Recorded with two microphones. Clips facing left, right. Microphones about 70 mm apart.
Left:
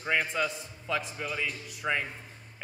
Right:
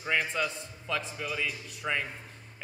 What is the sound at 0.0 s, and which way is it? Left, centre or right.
Speech, centre.